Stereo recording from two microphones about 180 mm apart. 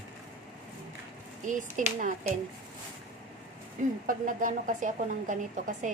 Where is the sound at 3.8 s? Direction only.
50° right (ahead or behind).